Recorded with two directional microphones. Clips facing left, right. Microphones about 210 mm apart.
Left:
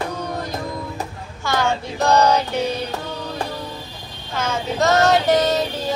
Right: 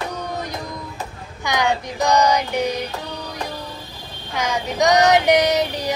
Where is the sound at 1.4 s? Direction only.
15° right (ahead or behind).